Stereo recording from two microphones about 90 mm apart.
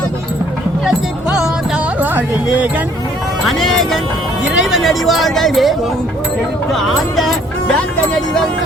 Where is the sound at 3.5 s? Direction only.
5° left (ahead or behind).